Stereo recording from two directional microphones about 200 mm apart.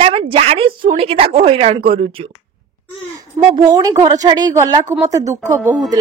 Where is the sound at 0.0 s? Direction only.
30° right (ahead or behind).